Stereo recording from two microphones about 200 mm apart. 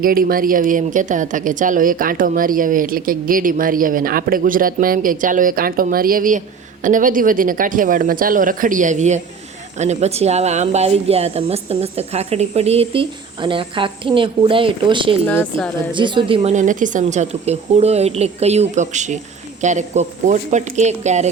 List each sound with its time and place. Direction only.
0.0 s a woman's voice: 45° right (ahead or behind); by 15.2 s 25° right (ahead or behind)
15.3 s a woman's voice: 10° left (ahead or behind)
15.9 s speech: 25° right (ahead or behind)